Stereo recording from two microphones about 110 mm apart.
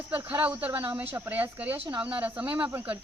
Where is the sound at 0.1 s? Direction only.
20° right (ahead or behind).